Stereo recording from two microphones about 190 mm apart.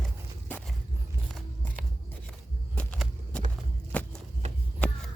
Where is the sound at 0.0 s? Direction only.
10° left (ahead or behind).